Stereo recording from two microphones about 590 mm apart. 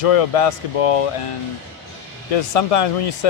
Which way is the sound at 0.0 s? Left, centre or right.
Left.